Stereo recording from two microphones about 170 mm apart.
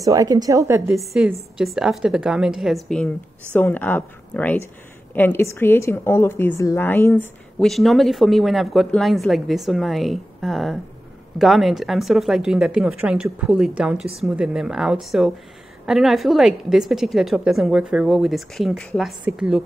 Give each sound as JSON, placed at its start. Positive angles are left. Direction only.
{"t": 0.0, "sound": "a woman's voice", "side_deg": -20}
{"t": 0.9, "sound": "a woman's voice", "side_deg": -5}
{"t": 7.5, "sound": "speech", "side_deg": 0}